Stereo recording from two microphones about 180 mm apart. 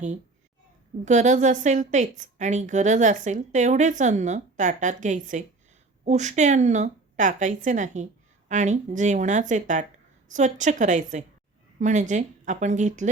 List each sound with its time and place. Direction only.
1.0 s a woman's voice: 40° right (ahead or behind)